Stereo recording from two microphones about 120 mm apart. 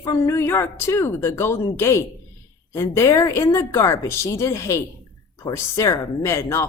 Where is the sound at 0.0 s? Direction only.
25° left (ahead or behind).